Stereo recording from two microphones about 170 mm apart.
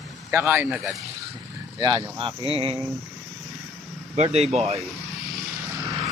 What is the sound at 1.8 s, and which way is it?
Speech, 30° right (ahead or behind).